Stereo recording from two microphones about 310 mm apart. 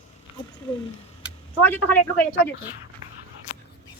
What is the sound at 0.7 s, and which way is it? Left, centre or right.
Speech, centre.